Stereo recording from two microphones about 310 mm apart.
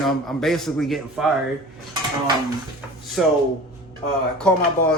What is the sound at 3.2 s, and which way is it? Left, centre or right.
Speech, centre.